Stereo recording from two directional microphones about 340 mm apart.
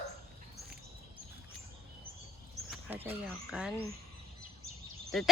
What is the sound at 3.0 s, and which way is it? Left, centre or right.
Speech, centre.